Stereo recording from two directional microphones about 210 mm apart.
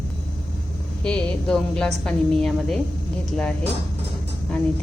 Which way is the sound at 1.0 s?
5° left (ahead or behind).